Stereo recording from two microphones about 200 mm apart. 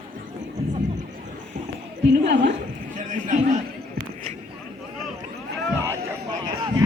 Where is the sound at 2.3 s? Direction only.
60° right (ahead or behind).